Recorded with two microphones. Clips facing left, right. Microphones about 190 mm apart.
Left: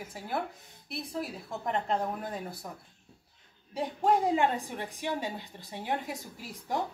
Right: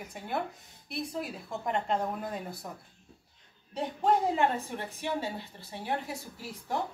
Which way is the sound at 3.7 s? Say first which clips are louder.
Even; 10° left (ahead or behind).